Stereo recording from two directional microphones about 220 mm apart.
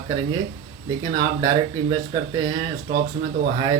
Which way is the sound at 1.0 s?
20° right (ahead or behind).